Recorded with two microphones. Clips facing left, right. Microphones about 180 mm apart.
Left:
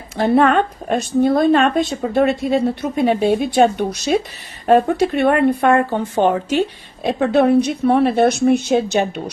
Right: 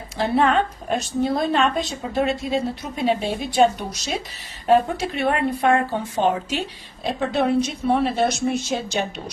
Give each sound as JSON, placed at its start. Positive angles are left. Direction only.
{"t": 0.2, "sound": "speech", "side_deg": 55}